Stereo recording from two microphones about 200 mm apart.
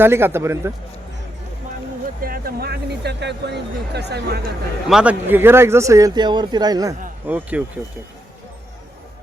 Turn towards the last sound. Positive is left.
turn(degrees=-5)  # may be behind; listen again after turning